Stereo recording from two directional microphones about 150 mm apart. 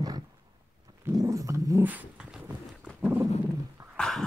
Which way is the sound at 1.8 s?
10° right (ahead or behind).